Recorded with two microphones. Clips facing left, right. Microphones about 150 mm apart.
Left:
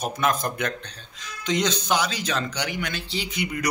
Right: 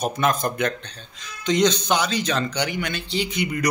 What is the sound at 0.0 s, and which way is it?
Speech, 5° left (ahead or behind).